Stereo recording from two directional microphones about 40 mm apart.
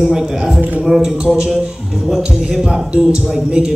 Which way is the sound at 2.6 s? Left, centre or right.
Right.